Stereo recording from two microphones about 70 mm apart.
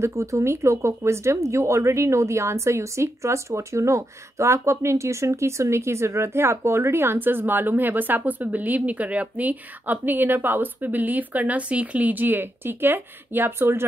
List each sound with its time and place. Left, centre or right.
0.0 s speech: right